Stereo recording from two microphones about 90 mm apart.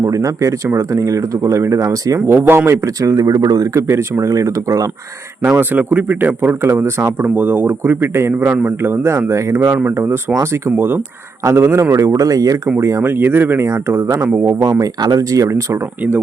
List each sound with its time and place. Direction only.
0.0 s speech: 35° right (ahead or behind)
3.8 s speech: 30° right (ahead or behind)
5.5 s a man's voice: 20° right (ahead or behind)
8.8 s a man's voice: 30° right (ahead or behind)
12.8 s a man's voice: 30° right (ahead or behind)
14.6 s speech: 45° right (ahead or behind)